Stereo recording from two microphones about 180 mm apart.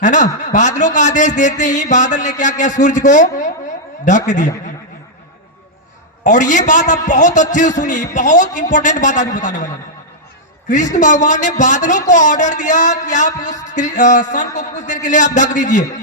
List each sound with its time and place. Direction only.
0.0 s speech: 45° left (ahead or behind)
6.2 s speech: 45° left (ahead or behind)
10.9 s speech: 45° left (ahead or behind)